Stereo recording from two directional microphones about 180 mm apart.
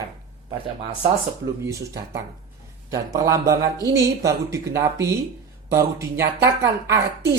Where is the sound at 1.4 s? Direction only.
15° right (ahead or behind).